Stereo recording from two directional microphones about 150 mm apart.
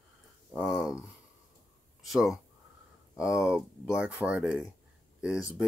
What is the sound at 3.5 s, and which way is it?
Speech, 5° right (ahead or behind).